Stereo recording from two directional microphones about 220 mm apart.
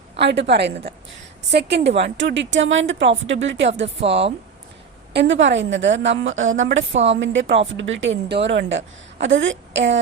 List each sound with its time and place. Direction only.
0.2 s a woman's voice: 50° right (ahead or behind)
5.1 s a woman's voice: 55° right (ahead or behind)